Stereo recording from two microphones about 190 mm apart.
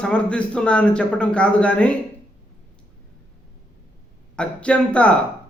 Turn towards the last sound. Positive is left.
turn(degrees=5)  # may be behind; listen again after turning